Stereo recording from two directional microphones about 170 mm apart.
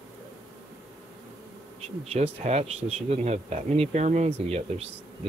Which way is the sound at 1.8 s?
40° right (ahead or behind).